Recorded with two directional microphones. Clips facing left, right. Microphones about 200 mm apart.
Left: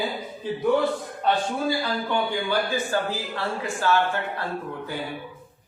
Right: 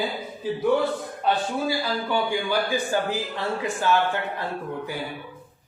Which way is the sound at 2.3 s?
15° right (ahead or behind).